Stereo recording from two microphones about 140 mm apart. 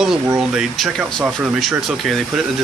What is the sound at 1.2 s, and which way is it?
Speech, 10° right (ahead or behind).